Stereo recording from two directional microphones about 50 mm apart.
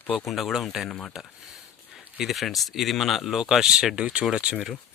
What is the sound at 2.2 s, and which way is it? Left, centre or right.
Speech, centre.